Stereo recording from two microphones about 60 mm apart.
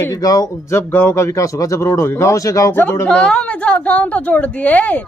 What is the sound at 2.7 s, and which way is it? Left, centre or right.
Speech, left.